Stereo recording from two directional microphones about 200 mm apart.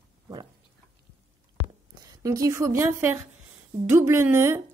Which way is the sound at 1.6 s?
65° right (ahead or behind).